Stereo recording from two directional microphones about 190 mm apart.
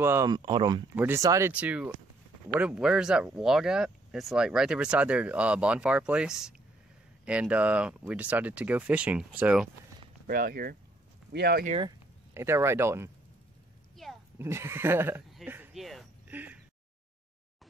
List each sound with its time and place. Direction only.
0.0 s speech: 15° right (ahead or behind)
0.9 s speech: 10° right (ahead or behind)
10.2 s speech: 50° right (ahead or behind)
11.8 s speech: 15° right (ahead or behind)
14.0 s a sound: centre (ahead or behind)
14.4 s speech: 15° right (ahead or behind)
15.3 s a sound: 10° right (ahead or behind)